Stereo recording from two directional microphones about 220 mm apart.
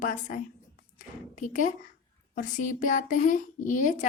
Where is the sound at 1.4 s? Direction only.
35° left (ahead or behind).